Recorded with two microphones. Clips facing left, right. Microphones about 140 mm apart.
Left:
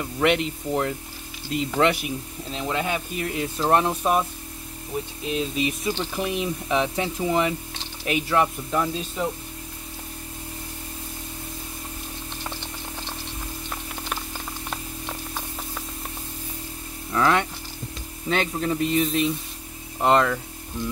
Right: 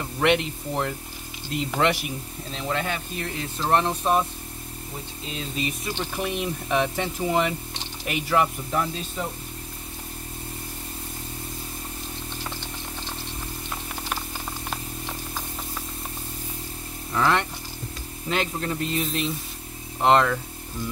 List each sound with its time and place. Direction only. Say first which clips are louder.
0.2 s speech: even; centre (ahead or behind)
5.6 s speech: left 4 dB; centre (ahead or behind)
17.1 s speech: left 2 dB; centre (ahead or behind)